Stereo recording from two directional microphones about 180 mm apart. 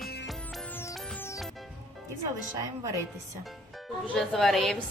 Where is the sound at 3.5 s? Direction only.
Centre (ahead or behind).